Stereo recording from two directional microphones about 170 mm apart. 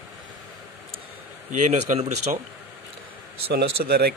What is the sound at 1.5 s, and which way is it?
Speech, 45° right (ahead or behind).